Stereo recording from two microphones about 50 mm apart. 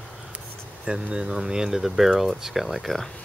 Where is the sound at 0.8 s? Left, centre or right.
Centre.